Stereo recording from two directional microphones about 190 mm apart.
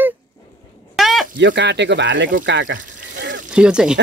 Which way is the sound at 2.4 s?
75° right (ahead or behind).